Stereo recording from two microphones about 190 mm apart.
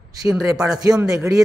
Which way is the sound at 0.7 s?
20° right (ahead or behind).